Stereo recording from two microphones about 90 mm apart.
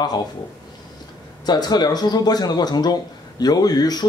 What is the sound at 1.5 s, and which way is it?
Speech, 50° left (ahead or behind).